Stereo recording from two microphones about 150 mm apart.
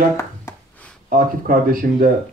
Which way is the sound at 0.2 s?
20° left (ahead or behind).